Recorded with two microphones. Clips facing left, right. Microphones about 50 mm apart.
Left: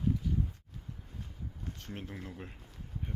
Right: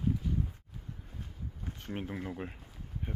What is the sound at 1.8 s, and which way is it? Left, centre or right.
Speech, centre.